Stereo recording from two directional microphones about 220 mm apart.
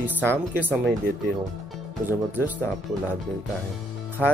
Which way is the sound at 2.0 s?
10° right (ahead or behind).